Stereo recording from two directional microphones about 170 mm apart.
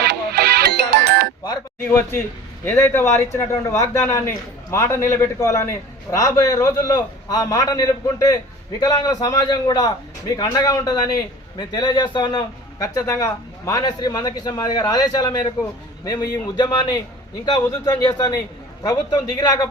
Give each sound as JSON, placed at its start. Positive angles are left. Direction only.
{"t": 0.0, "sound": "music", "side_deg": -70}
{"t": 1.8, "sound": "a man's voice", "side_deg": 10}